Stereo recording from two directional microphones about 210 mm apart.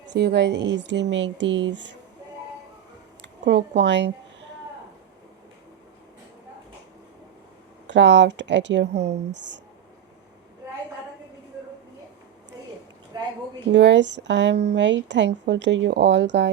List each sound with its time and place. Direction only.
0.0 s a woman's voice: 55° right (ahead or behind)
3.2 s a sound: 55° right (ahead or behind)
7.9 s a woman's voice: 60° right (ahead or behind)
9.0 s speech: 30° right (ahead or behind)
9.3 s a woman's voice: 55° right (ahead or behind)
13.1 s a woman's voice: 20° right (ahead or behind)
13.7 s a woman's voice: 55° right (ahead or behind)